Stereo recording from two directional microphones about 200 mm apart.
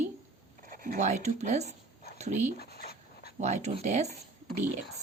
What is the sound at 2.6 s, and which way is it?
Dog, 50° left (ahead or behind).